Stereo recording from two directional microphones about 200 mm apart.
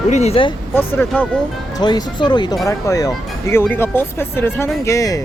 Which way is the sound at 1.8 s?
20° left (ahead or behind).